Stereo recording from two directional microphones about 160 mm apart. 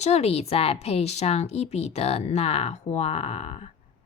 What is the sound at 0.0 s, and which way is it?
A woman's voice, 40° left (ahead or behind).